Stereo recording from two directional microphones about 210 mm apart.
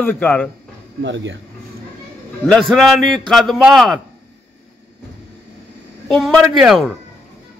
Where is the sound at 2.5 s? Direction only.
Centre (ahead or behind).